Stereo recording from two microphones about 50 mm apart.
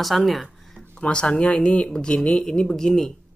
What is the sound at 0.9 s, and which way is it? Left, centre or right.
Speech, left.